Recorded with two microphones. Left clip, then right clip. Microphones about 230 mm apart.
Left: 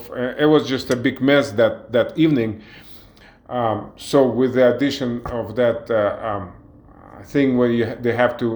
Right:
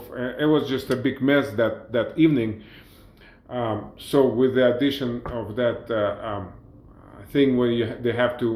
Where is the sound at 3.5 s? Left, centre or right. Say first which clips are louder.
Left 6 dB; left.